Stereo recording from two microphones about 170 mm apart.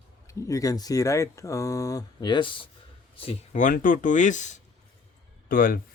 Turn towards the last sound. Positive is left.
turn(degrees=55)  # may be behind; listen again after turning